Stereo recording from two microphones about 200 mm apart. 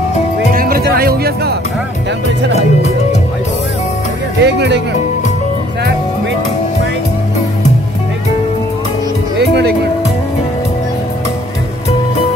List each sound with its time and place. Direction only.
0.6 s music: 50° right (ahead or behind)
2.5 s speech: 35° left (ahead or behind)
4.4 s speech: 60° right (ahead or behind)
9.4 s music: 55° right (ahead or behind)